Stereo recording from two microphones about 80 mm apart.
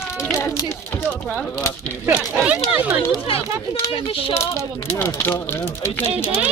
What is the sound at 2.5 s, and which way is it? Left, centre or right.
Speech, centre.